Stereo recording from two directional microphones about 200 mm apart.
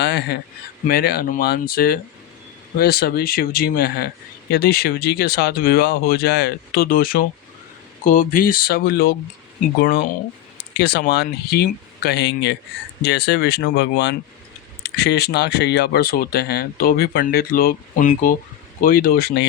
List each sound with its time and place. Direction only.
0.0 s speech: 55° left (ahead or behind)